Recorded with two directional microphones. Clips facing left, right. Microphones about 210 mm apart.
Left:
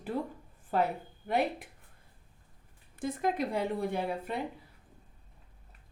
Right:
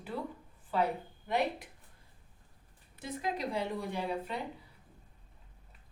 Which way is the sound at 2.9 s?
50° left (ahead or behind).